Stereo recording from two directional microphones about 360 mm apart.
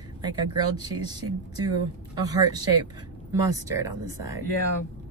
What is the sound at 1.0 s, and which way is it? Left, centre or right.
Speech, centre.